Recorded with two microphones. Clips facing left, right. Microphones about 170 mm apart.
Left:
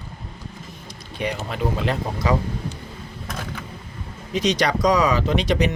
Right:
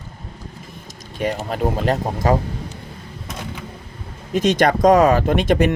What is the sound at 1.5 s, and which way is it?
Speech, 45° right (ahead or behind).